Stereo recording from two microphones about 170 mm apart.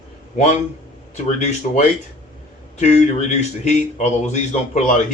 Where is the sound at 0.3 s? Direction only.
40° left (ahead or behind).